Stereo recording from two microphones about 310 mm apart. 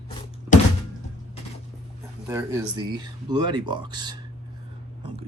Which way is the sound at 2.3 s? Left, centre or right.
Centre.